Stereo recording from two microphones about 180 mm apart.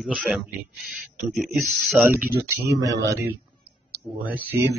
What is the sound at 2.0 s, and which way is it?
Speech, 10° right (ahead or behind).